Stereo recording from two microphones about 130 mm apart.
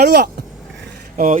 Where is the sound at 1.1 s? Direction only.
90° right.